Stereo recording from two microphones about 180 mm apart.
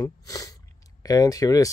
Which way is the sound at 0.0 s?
20° left (ahead or behind).